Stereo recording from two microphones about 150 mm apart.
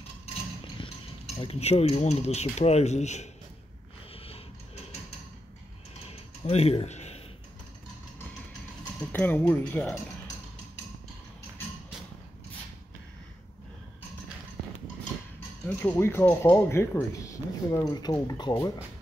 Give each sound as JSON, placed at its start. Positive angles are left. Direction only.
{"t": 0.8, "sound": "stir", "side_deg": 35}
{"t": 1.4, "sound": "speech", "side_deg": 45}
{"t": 6.4, "sound": "speech", "side_deg": 45}
{"t": 9.1, "sound": "speech", "side_deg": 10}
{"t": 15.6, "sound": "speech", "side_deg": 15}